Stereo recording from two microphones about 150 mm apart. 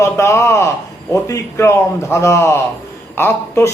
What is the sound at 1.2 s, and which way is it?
A man's voice, 20° left (ahead or behind).